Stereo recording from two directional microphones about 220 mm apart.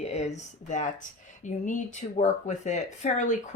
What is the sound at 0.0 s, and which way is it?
Speech, 30° left (ahead or behind).